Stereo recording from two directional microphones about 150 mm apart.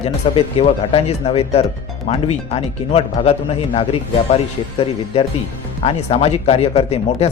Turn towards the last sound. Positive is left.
turn(degrees=45)  # may be behind; listen again after turning